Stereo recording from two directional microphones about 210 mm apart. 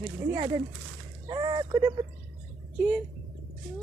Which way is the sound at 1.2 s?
20° right (ahead or behind).